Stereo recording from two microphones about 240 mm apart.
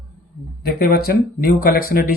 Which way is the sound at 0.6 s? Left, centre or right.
Left.